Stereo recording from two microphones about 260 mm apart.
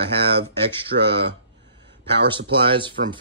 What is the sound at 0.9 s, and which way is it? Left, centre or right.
Speech, right.